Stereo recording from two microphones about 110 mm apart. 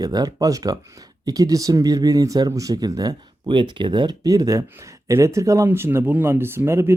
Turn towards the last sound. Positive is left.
turn(degrees=-25)  # may be behind; listen again after turning